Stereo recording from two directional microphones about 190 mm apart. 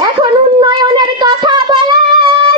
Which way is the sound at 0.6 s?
20° right (ahead or behind).